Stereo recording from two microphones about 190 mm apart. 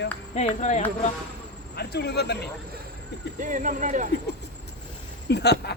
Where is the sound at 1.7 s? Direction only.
60° left (ahead or behind).